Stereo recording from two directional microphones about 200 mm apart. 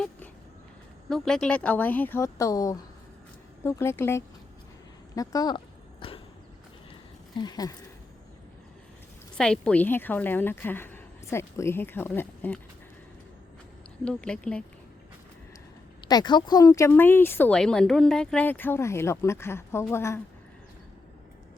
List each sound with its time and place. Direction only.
1.1 s speech: centre (ahead or behind)
5.1 s a sound: 20° left (ahead or behind)
7.3 s speech: 20° left (ahead or behind)
9.4 s speech: 5° left (ahead or behind)
14.0 s speech: 5° left (ahead or behind)
16.0 s speech: 20° left (ahead or behind)